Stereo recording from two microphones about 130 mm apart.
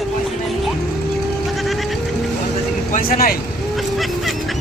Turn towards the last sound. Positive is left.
turn(degrees=90)